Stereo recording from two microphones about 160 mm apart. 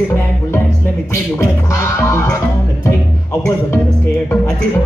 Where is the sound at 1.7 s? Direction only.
20° left (ahead or behind).